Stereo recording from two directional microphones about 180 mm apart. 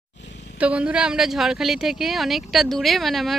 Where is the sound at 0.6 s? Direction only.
5° right (ahead or behind).